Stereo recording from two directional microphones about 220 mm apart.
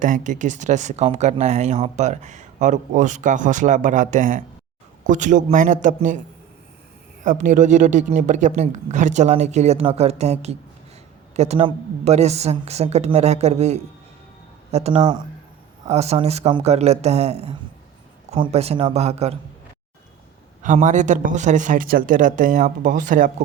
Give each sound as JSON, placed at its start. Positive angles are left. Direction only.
{"t": 0.0, "sound": "speech", "side_deg": -35}
{"t": 7.3, "sound": "a woman's voice", "side_deg": -35}
{"t": 20.6, "sound": "speech", "side_deg": -35}